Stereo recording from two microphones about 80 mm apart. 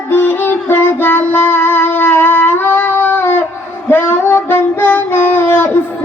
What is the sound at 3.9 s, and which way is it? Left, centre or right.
Female singing, left.